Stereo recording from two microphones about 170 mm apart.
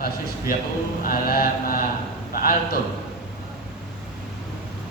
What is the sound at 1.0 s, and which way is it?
Mantra, 60° left (ahead or behind).